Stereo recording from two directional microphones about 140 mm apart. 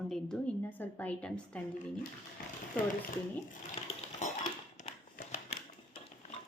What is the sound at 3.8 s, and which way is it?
Cutlery, 45° left (ahead or behind).